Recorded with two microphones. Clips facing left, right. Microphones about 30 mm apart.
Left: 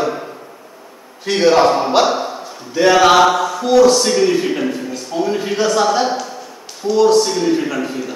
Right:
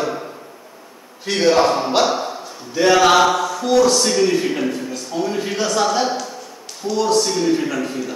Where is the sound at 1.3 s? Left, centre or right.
Centre.